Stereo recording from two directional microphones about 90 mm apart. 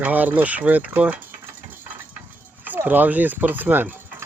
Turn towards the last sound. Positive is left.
turn(degrees=-20)  # may be behind; listen again after turning